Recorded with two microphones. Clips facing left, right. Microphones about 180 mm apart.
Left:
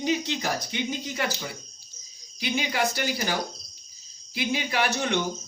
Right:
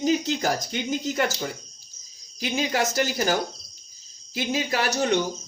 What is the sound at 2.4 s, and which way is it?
A man's voice, 45° right (ahead or behind).